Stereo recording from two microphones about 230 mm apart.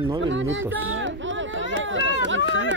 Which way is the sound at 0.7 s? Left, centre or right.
Right.